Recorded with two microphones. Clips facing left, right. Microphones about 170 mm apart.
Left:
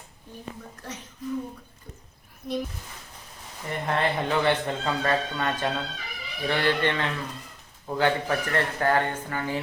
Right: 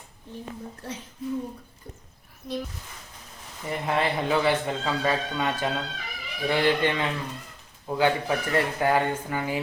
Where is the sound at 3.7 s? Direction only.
5° right (ahead or behind).